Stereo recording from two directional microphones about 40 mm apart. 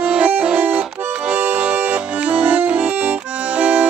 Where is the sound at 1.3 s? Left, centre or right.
Right.